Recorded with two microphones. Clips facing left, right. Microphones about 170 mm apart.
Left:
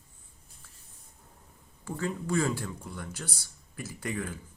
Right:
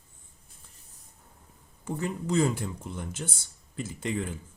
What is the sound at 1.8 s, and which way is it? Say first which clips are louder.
Speech: right 1 dB; 20° right (ahead or behind).